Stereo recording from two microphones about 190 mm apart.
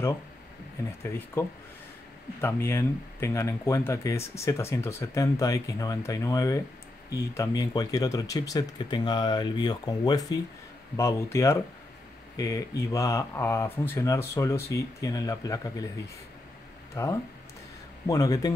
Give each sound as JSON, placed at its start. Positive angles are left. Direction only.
{"t": 1.0, "sound": "speech", "side_deg": 15}
{"t": 2.4, "sound": "speech", "side_deg": 15}
{"t": 16.9, "sound": "speech", "side_deg": 15}